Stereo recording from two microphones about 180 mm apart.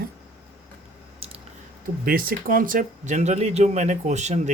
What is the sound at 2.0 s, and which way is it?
Speech, 55° right (ahead or behind).